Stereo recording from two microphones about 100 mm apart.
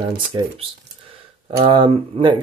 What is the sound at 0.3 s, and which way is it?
Speech, 55° right (ahead or behind).